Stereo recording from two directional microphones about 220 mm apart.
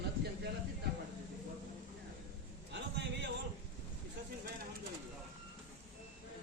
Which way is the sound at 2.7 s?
55° right (ahead or behind).